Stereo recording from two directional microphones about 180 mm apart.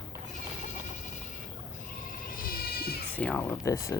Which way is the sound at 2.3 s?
50° left (ahead or behind).